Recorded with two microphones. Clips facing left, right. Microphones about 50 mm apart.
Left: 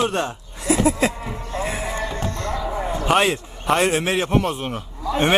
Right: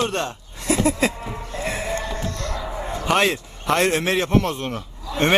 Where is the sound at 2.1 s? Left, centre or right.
Left.